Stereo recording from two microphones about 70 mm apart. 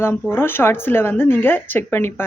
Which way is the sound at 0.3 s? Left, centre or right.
Left.